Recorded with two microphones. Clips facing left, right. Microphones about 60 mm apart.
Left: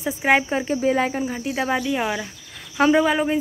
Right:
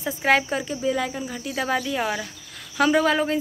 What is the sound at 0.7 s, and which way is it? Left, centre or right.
Speech, left.